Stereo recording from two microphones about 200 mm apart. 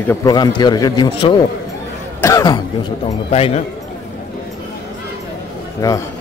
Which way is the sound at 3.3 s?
30° left (ahead or behind).